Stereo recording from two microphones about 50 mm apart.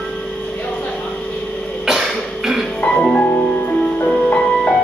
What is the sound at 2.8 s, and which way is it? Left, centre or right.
Music, centre.